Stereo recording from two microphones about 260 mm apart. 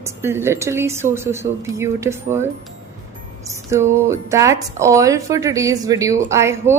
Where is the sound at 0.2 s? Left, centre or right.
Centre.